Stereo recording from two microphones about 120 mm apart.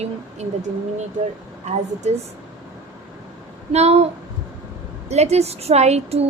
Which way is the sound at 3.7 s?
60° right (ahead or behind).